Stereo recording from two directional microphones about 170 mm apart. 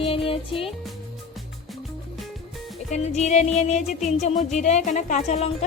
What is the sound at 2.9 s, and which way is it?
Speech, 40° left (ahead or behind).